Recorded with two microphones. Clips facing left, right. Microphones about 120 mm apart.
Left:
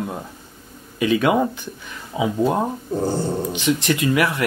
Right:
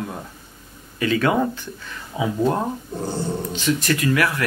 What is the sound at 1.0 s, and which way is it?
Speech, 15° left (ahead or behind).